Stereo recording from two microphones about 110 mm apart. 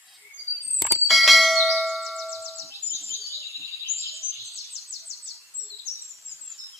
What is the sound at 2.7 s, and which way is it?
Bird, 25° left (ahead or behind).